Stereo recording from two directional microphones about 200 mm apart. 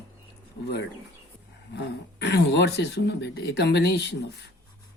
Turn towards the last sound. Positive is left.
turn(degrees=60)  # may be behind; listen again after turning